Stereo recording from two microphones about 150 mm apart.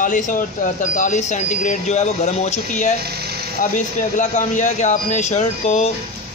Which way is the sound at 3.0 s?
90° right.